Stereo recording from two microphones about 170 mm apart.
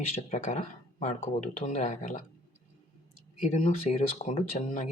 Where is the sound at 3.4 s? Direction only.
45° left (ahead or behind).